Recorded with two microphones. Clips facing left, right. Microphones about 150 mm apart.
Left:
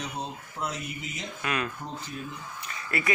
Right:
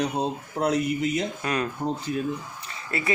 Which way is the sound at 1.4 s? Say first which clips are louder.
Right 5 dB; 35° right (ahead or behind).